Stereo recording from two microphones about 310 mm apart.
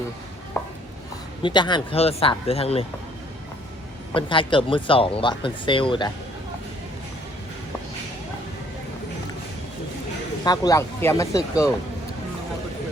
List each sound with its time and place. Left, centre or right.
0.6 s a sound: centre
1.4 s speech: centre
4.1 s speech: centre
10.4 s speech: centre